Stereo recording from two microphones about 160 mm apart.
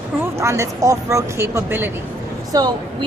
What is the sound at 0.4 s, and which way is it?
A woman's voice, 20° right (ahead or behind).